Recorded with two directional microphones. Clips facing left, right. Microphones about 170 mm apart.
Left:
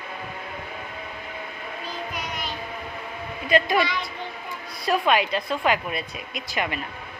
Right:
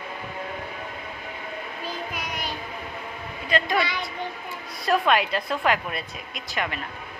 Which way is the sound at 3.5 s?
15° left (ahead or behind).